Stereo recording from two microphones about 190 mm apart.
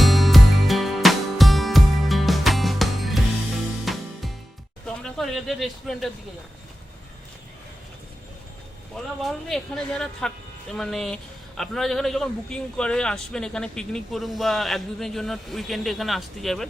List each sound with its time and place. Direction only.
0.0 s music: centre (ahead or behind)
4.9 s a sound: 5° left (ahead or behind)
9.2 s a woman's voice: 5° left (ahead or behind)